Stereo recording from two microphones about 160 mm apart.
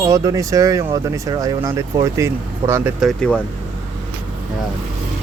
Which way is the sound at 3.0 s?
5° left (ahead or behind).